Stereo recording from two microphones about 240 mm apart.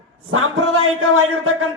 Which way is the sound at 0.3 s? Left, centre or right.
Right.